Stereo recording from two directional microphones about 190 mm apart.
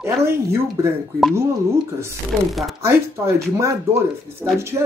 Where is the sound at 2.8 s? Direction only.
15° right (ahead or behind).